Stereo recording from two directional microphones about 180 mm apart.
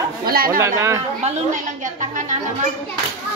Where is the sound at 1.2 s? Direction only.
45° right (ahead or behind).